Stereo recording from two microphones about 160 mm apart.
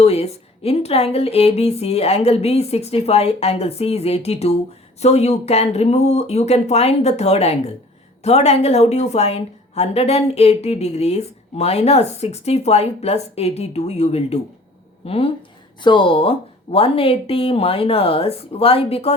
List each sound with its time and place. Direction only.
0.0 s a woman's voice: 40° left (ahead or behind)